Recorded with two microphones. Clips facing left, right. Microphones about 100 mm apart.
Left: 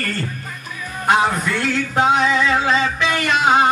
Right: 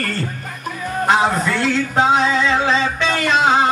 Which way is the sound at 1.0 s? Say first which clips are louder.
Right 1 dB; 30° right (ahead or behind).